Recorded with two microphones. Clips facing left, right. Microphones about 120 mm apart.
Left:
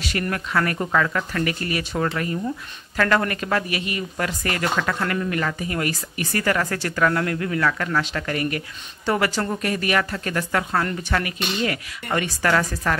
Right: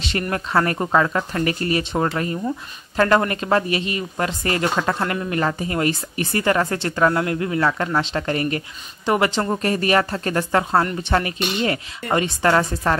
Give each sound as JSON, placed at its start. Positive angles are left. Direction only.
{"t": 0.0, "sound": "speech", "side_deg": -30}